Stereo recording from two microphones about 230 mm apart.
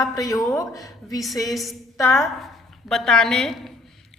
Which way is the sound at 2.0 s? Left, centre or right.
Centre.